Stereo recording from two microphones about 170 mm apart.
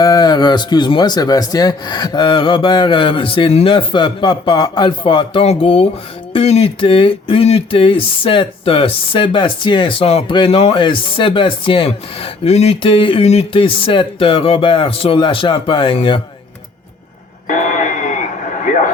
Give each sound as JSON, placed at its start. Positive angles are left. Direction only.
{"t": 0.0, "sound": "a man's voice", "side_deg": 20}
{"t": 17.5, "sound": "radio", "side_deg": 50}